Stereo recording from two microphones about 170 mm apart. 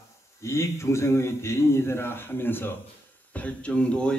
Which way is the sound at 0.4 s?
15° left (ahead or behind).